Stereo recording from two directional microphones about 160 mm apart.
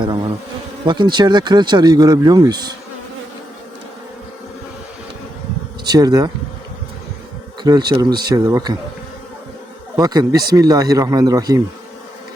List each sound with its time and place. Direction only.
0.9 s speech: 30° right (ahead or behind)
5.8 s speech: 25° right (ahead or behind)
7.6 s speech: 25° right (ahead or behind)
10.0 s speech: 25° right (ahead or behind)